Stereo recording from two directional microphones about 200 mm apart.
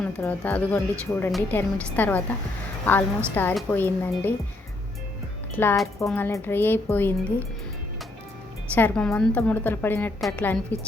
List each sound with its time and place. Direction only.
0.2 s a woman's voice: 10° left (ahead or behind)
5.5 s a woman's voice: 5° left (ahead or behind)
8.7 s a woman's voice: 5° left (ahead or behind)